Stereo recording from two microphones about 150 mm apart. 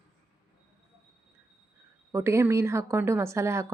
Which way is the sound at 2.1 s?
20° right (ahead or behind).